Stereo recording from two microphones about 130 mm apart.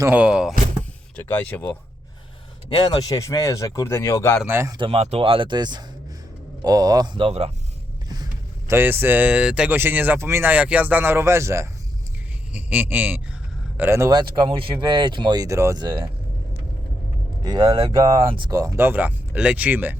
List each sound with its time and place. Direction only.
0.1 s speech: 5° right (ahead or behind)
1.1 s speech: 15° left (ahead or behind)
2.6 s speech: 35° left (ahead or behind); by 4.4 s 20° left (ahead or behind)
4.4 s speech: 20° right (ahead or behind)
4.8 s speech: 50° right (ahead or behind)
8.1 s a sound: 30° right (ahead or behind)
8.7 s speech: 15° right (ahead or behind)
14.1 s speech: 35° right (ahead or behind)
15.8 s speech: 35° right (ahead or behind)
17.4 s speech: 30° right (ahead or behind); by 20.0 s 15° right (ahead or behind)